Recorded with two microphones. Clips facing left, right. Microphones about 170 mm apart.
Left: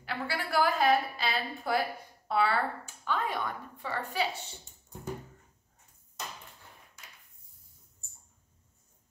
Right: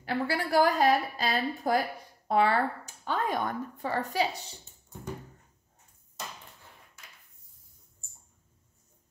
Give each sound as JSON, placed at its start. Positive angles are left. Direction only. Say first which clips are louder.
{"t": 0.0, "sound": "a woman's voice", "louder": "right 5 dB", "side_deg": -40}